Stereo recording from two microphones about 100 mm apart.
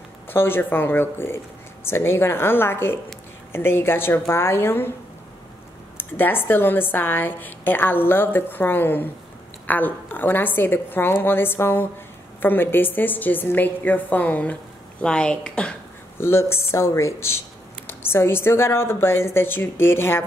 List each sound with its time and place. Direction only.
0.3 s a woman's voice: 20° left (ahead or behind)
5.9 s a woman's voice: 20° left (ahead or behind)
16.2 s a woman's voice: 25° left (ahead or behind)